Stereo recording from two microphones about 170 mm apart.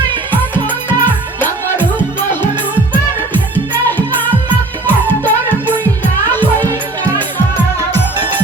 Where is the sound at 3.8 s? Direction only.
10° left (ahead or behind).